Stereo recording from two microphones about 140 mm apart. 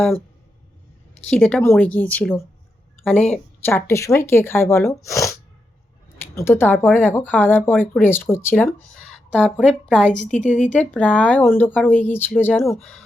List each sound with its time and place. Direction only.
1.3 s speech: 10° left (ahead or behind)
9.0 s a woman's voice: 5° left (ahead or behind)
10.3 s speech: 60° left (ahead or behind)
10.7 s speech: 10° left (ahead or behind)